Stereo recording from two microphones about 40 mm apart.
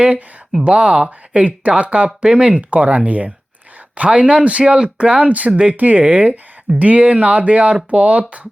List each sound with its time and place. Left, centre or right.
0.6 s speech: right
1.3 s speech: right
2.6 s speech: right
5.7 s speech: right